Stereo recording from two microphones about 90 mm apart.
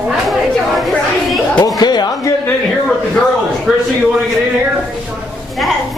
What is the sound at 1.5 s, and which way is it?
Speech, 45° left (ahead or behind).